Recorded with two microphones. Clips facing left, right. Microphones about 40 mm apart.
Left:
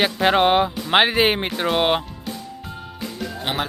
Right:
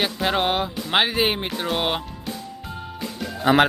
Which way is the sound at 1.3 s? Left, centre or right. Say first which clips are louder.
Left 3 dB; left.